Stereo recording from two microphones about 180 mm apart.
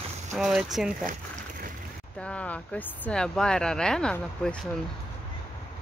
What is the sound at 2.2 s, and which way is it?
Speech, 5° left (ahead or behind).